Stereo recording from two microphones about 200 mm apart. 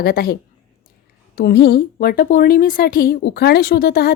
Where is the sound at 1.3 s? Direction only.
55° left (ahead or behind).